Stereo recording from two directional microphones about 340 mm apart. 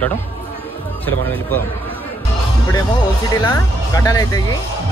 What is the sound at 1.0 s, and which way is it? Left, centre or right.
Speech, centre.